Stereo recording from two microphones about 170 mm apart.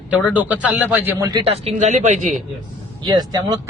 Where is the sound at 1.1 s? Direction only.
20° right (ahead or behind).